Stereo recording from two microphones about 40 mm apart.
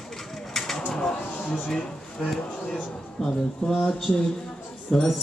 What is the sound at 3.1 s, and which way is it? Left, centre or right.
Speech, centre.